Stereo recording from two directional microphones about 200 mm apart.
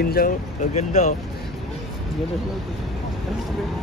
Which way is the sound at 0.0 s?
50° left (ahead or behind).